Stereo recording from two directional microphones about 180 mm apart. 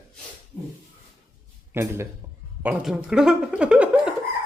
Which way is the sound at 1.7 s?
15° right (ahead or behind).